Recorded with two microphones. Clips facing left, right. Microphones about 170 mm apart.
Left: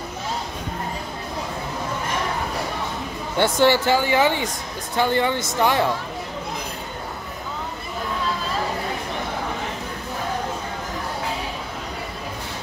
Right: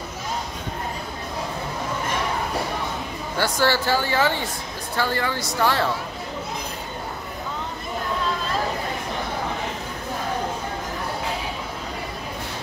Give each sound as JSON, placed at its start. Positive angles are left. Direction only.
{"t": 3.3, "sound": "speech", "side_deg": 25}